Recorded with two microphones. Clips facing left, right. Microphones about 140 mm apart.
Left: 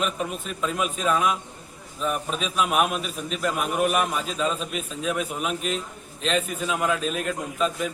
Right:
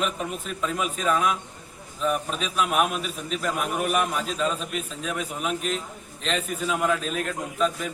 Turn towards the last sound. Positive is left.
turn(degrees=0)  # may be behind; listen again after turning